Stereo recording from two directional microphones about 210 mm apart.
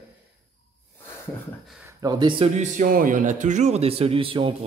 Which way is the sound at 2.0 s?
20° right (ahead or behind).